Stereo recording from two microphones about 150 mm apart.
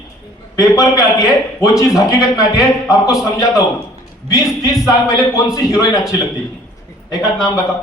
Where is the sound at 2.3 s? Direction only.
20° left (ahead or behind).